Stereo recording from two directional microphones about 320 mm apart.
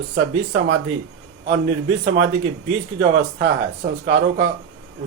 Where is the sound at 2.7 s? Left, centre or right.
Right.